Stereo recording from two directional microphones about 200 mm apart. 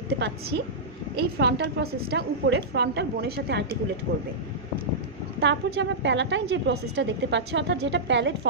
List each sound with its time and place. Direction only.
0.2 s a woman's voice: 55° right (ahead or behind)
5.4 s a woman's voice: 60° right (ahead or behind)